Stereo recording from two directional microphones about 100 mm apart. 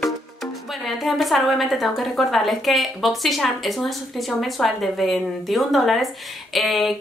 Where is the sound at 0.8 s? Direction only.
Centre (ahead or behind).